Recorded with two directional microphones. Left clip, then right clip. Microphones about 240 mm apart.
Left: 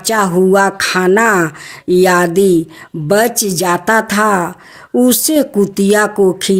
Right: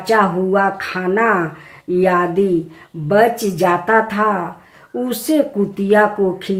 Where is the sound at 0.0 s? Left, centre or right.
Left.